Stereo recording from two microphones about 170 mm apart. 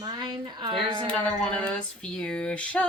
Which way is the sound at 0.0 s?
25° right (ahead or behind).